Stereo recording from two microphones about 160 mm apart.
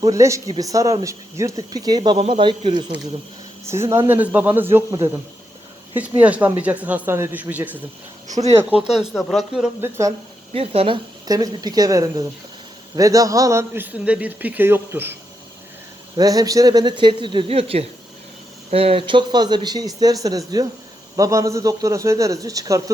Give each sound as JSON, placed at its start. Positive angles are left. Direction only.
{"t": 0.0, "sound": "speech", "side_deg": -20}
{"t": 3.7, "sound": "a man's voice", "side_deg": -15}
{"t": 8.9, "sound": "speech", "side_deg": 0}
{"t": 10.5, "sound": "a man's voice", "side_deg": -40}
{"t": 16.1, "sound": "speech", "side_deg": -25}